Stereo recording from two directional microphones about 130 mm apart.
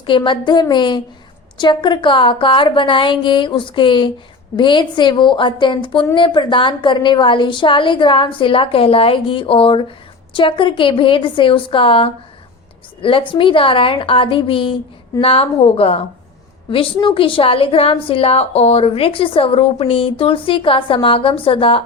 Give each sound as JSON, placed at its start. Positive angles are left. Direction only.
{"t": 0.0, "sound": "a woman's voice", "side_deg": 40}